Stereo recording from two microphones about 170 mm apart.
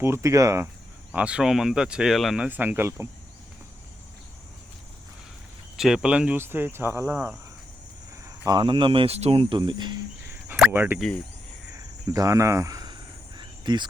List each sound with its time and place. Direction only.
0.0 s speech: 15° right (ahead or behind)
1.1 s speech: 5° right (ahead or behind)
5.7 s speech: 5° right (ahead or behind); by 9.9 s 25° right (ahead or behind)
10.7 s speech: 10° right (ahead or behind)
11.8 s cricket: 20° right (ahead or behind)